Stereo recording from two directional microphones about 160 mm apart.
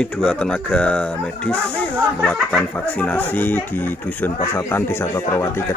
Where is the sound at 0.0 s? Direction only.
5° left (ahead or behind).